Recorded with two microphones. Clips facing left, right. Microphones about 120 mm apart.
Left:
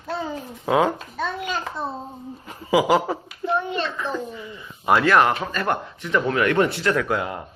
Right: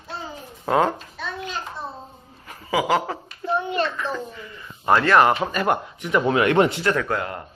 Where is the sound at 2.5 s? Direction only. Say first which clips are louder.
Left 3 dB; 15° left (ahead or behind).